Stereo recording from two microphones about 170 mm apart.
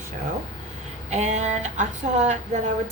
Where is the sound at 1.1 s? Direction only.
40° right (ahead or behind).